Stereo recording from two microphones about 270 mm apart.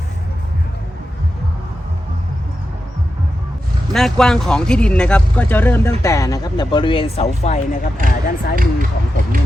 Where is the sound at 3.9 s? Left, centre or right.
Centre; by 8.6 s left.